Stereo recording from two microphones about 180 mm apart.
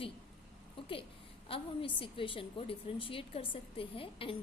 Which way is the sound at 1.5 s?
30° left (ahead or behind).